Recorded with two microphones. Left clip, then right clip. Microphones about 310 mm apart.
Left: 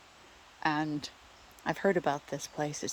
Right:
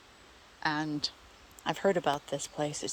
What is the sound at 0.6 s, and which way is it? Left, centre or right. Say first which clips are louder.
Speech: even; centre.